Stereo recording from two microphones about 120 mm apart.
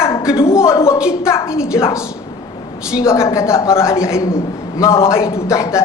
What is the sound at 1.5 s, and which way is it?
Speech, 5° right (ahead or behind).